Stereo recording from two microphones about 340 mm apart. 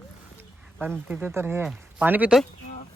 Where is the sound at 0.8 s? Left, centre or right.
Centre.